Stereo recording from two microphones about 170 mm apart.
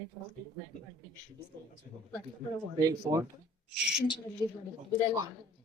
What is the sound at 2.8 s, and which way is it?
Speech, 20° right (ahead or behind).